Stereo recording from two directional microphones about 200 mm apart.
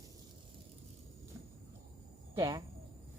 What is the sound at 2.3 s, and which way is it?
Speech, 20° right (ahead or behind).